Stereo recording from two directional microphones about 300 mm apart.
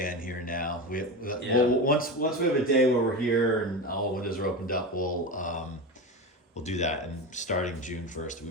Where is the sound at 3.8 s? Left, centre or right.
Left.